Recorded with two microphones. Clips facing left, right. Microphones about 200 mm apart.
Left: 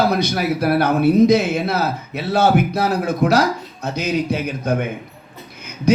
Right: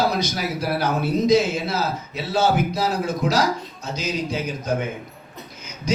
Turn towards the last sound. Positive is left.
turn(degrees=60)  # may be behind; listen again after turning